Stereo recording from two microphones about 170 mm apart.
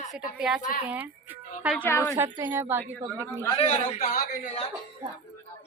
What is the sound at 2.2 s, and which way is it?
Speech, 15° right (ahead or behind).